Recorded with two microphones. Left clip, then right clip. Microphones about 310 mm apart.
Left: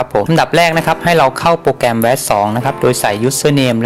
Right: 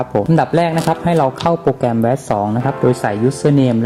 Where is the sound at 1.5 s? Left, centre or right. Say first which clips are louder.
Left 3 dB; left.